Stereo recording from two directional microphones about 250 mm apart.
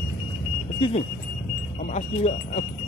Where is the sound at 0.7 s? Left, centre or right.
Left.